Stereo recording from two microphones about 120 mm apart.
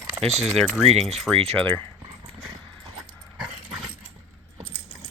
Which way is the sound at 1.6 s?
15° left (ahead or behind).